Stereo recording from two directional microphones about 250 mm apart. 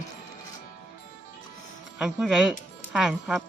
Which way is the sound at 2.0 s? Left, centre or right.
Centre.